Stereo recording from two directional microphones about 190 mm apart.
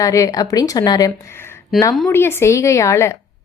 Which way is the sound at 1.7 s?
Centre (ahead or behind).